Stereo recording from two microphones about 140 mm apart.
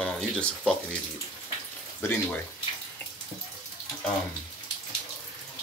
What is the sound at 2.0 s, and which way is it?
Speech, 20° left (ahead or behind).